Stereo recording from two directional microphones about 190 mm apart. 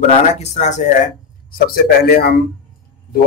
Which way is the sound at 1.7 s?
55° left (ahead or behind).